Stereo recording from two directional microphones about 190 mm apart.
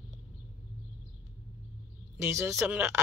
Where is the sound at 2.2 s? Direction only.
15° right (ahead or behind).